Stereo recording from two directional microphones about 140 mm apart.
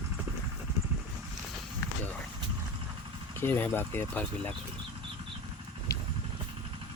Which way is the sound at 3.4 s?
15° left (ahead or behind).